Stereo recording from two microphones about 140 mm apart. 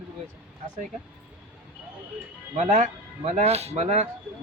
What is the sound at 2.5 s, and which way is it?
Speech, 55° right (ahead or behind).